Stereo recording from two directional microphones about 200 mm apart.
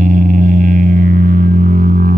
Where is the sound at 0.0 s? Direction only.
40° right (ahead or behind).